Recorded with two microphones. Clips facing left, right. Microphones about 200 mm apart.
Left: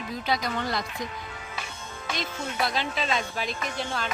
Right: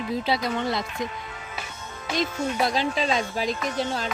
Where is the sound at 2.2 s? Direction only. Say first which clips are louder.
Right 6 dB; 40° right (ahead or behind).